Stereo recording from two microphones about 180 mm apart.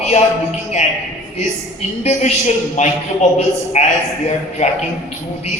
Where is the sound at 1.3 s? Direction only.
40° left (ahead or behind).